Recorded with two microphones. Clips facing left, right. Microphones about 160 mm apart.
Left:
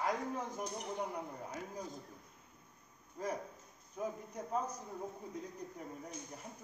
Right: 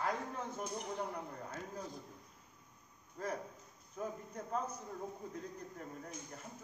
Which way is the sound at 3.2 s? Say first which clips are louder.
Left 1 dB; 10° left (ahead or behind).